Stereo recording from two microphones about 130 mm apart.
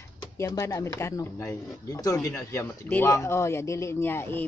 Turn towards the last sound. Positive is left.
turn(degrees=15)  # may be behind; listen again after turning